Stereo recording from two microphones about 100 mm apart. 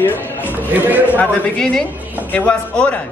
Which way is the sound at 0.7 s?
15° right (ahead or behind).